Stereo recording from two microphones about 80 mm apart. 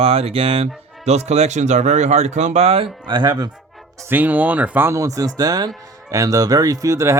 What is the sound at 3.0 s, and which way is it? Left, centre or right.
Speech, right.